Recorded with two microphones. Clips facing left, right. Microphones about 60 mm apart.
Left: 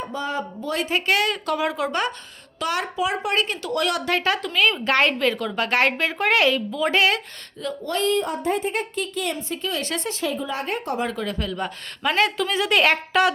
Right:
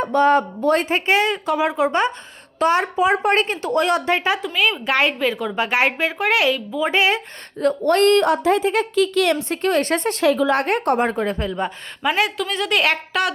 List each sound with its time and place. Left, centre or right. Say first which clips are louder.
0.0 s speech: right 12 dB; right
1.0 s a woman's voice: right 3 dB; right; by 6.7 s centre
6.7 s a woman's voice: right 3 dB; centre
7.6 s speech: right 9 dB; right
10.2 s speech: right 12 dB; right
11.0 s speech: right 5 dB; right
12.1 s a woman's voice: left 2 dB; centre